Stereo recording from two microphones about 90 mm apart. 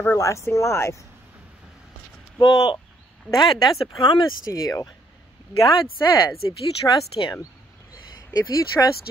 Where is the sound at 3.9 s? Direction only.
55° left (ahead or behind).